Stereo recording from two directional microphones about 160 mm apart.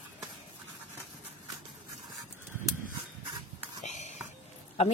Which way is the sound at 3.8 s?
45° left (ahead or behind).